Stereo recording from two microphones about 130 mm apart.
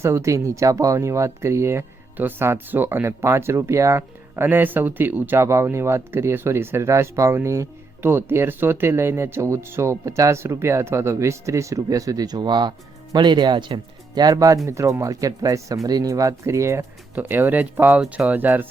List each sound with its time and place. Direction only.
0.0 s speech: 20° right (ahead or behind)